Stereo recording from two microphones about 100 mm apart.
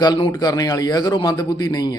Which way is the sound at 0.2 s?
45° left (ahead or behind).